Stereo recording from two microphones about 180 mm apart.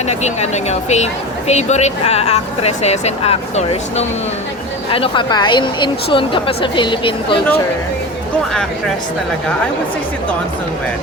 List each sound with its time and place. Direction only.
0.1 s a woman's voice: 40° left (ahead or behind)